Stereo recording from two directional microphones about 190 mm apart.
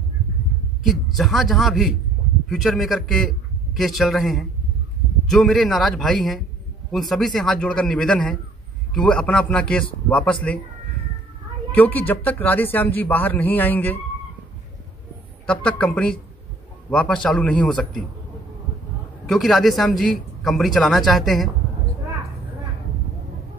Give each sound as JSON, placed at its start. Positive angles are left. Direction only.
{"t": 1.1, "sound": "speech", "side_deg": 0}
{"t": 11.7, "sound": "speech", "side_deg": 10}
{"t": 15.4, "sound": "speech", "side_deg": 5}
{"t": 19.2, "sound": "speech", "side_deg": 0}